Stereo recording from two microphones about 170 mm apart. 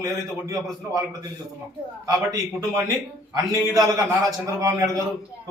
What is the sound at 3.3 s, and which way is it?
A man's voice, 20° right (ahead or behind).